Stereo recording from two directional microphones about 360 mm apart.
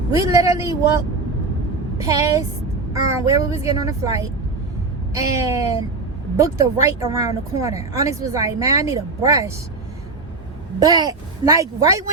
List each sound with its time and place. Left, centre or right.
0.2 s speech: centre
10.8 s speech: centre